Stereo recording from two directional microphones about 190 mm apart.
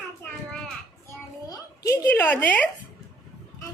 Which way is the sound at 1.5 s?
15° left (ahead or behind).